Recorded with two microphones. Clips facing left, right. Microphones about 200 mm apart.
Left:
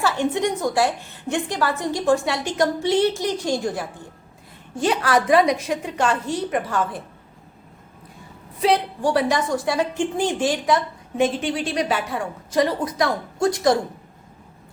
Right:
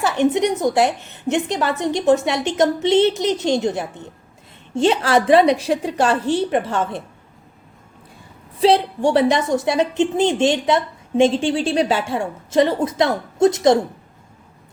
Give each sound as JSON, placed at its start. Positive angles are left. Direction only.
{"t": 0.0, "sound": "a woman's voice", "side_deg": -20}
{"t": 8.6, "sound": "a woman's voice", "side_deg": -25}